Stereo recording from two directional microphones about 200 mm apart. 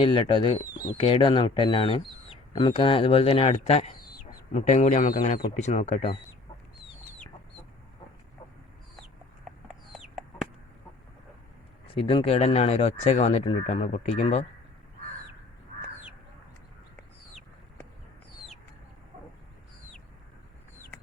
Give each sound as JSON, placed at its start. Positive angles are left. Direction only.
{"t": 0.0, "sound": "speech", "side_deg": 25}
{"t": 9.9, "sound": "chicken", "side_deg": 0}
{"t": 11.9, "sound": "speech", "side_deg": 30}